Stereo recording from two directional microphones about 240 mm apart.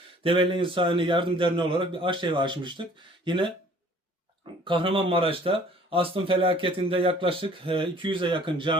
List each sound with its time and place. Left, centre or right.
0.2 s speech: right
4.6 s speech: right